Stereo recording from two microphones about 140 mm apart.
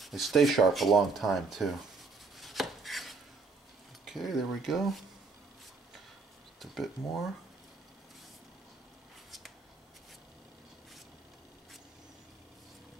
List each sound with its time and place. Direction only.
0.0 s speech: centre (ahead or behind)
2.3 s chopping: centre (ahead or behind)
4.0 s speech: centre (ahead or behind)
6.6 s speech: centre (ahead or behind)